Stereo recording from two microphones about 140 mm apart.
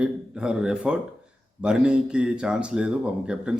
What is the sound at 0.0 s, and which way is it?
A man's voice, 5° right (ahead or behind).